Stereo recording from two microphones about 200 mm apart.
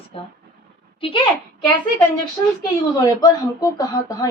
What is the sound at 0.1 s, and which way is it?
Speech, 30° left (ahead or behind).